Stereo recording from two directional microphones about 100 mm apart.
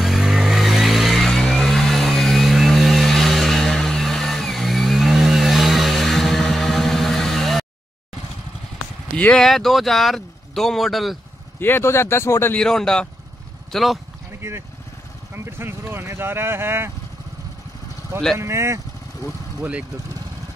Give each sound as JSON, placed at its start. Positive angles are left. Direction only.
{"t": 0.0, "sound": "vehicle", "side_deg": 0}
{"t": 9.1, "sound": "speech", "side_deg": 10}
{"t": 11.6, "sound": "speech", "side_deg": 25}
{"t": 12.5, "sound": "speech", "side_deg": 5}
{"t": 15.3, "sound": "speech", "side_deg": -25}
{"t": 18.4, "sound": "speech", "side_deg": -25}